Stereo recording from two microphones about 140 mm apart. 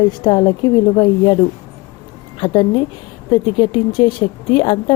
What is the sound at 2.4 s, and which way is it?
A woman's voice, 35° left (ahead or behind).